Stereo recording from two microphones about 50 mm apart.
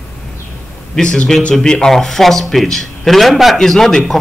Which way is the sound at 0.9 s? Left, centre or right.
Centre.